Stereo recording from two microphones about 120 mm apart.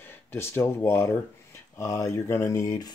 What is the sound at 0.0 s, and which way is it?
Speech, 20° left (ahead or behind).